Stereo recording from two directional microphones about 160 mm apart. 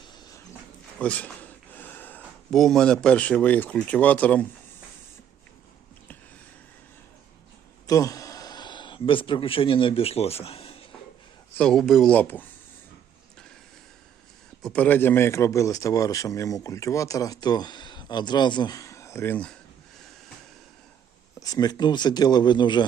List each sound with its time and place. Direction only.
0.9 s speech: 10° left (ahead or behind)
7.9 s speech: 20° left (ahead or behind); by 10.8 s 35° left (ahead or behind)
11.5 s speech: 5° left (ahead or behind)
14.6 s speech: 5° left (ahead or behind)
21.3 s speech: 25° left (ahead or behind)